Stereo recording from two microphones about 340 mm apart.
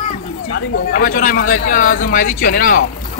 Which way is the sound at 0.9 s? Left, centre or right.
Left.